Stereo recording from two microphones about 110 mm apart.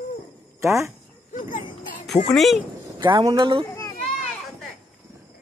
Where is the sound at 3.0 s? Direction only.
40° right (ahead or behind).